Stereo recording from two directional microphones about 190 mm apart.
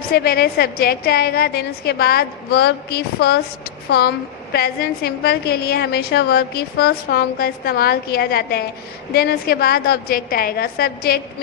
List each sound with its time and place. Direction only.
0.1 s a woman's voice: 55° left (ahead or behind)